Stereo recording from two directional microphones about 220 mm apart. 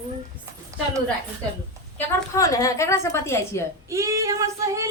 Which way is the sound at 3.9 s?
15° right (ahead or behind).